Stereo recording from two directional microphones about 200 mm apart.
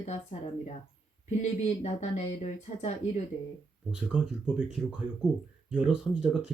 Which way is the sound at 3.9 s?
5° right (ahead or behind).